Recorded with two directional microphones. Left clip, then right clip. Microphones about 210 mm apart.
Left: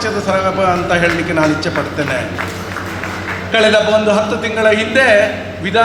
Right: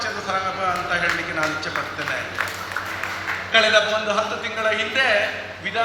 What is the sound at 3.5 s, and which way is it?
A man's voice, 55° left (ahead or behind).